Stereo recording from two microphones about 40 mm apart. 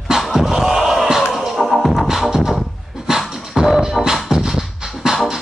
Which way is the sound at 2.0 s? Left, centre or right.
Centre.